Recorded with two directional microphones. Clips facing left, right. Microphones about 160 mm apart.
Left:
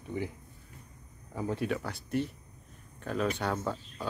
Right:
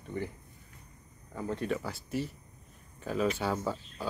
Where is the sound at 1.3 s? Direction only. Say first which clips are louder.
Left 1 dB; 5° left (ahead or behind).